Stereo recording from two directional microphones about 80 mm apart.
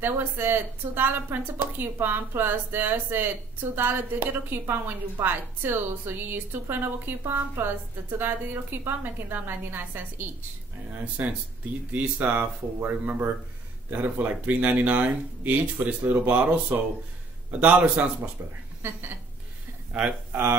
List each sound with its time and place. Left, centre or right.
0.0 s a woman's voice: right